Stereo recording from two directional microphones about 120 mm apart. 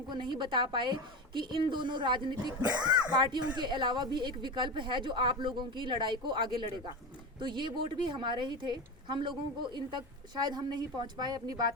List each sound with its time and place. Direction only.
0.1 s a woman's voice: 40° right (ahead or behind)